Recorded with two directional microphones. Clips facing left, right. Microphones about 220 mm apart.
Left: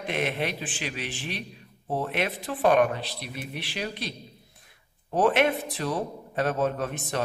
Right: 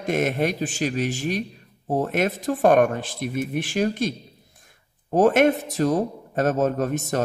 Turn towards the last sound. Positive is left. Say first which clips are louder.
# right 6 dB
turn(degrees=-45)  # may be behind; listen again after turning